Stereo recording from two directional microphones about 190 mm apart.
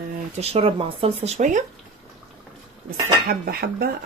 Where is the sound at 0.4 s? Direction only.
30° right (ahead or behind).